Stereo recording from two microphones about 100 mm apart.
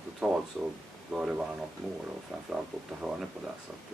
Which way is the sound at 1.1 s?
10° right (ahead or behind).